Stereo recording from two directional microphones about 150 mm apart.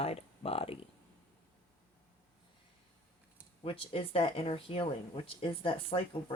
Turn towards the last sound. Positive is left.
turn(degrees=35)  # may be behind; listen again after turning